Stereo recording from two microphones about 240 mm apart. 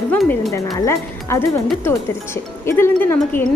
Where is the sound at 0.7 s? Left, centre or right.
Centre.